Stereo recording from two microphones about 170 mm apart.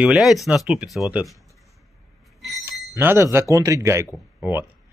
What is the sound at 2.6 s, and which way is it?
Speech, 15° right (ahead or behind).